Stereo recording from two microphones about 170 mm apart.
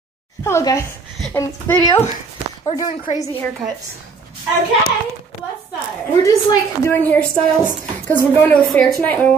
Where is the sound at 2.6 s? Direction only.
20° left (ahead or behind).